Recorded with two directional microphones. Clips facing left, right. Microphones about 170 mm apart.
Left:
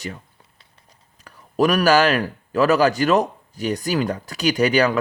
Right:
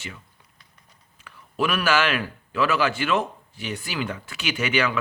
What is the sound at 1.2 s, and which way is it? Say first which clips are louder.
Speech: left 7 dB; 40° left (ahead or behind).